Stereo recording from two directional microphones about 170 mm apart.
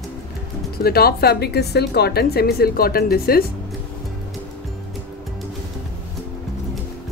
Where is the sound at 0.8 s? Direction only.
65° left (ahead or behind).